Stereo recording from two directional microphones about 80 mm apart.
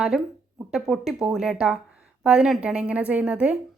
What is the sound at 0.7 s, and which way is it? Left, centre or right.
A woman's voice, centre.